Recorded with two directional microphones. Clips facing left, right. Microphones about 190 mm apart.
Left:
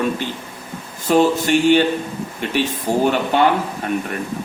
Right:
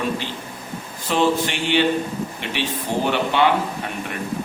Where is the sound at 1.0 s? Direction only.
45° left (ahead or behind).